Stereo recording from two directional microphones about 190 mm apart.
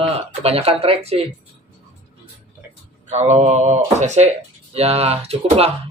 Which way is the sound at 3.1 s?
35° right (ahead or behind).